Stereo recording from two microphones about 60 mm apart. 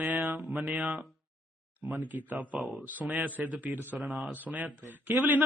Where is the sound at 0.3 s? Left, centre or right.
Centre.